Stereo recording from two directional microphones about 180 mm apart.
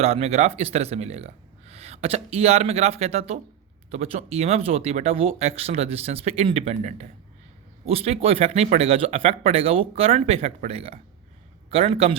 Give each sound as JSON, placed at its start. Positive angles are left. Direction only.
{"t": 0.0, "sound": "speech", "side_deg": -35}